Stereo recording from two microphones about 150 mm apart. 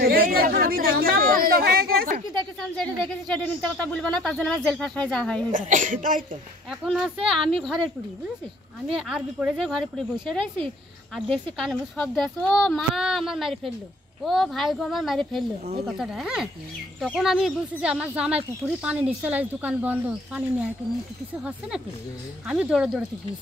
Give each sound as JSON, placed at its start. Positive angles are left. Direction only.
{"t": 0.0, "sound": "a sound", "side_deg": -85}
{"t": 2.8, "sound": "speech", "side_deg": 5}
{"t": 5.5, "sound": "speech", "side_deg": -60}
{"t": 6.7, "sound": "a woman's voice", "side_deg": 0}